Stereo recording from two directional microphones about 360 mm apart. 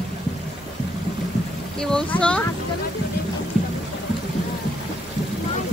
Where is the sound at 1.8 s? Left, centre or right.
Centre.